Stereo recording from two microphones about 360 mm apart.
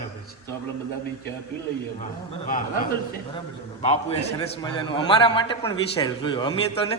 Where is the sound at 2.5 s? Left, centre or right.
Left.